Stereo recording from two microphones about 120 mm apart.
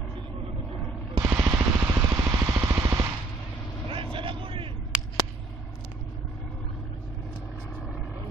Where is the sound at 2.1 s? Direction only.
25° right (ahead or behind).